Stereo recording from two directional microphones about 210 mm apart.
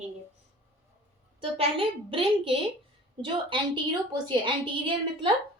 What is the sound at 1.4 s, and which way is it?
A woman's voice, 25° right (ahead or behind).